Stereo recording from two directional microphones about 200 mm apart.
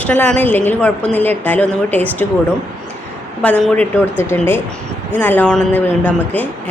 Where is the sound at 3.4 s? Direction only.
5° left (ahead or behind).